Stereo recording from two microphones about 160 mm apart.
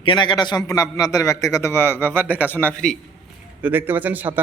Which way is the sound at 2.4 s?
10° left (ahead or behind).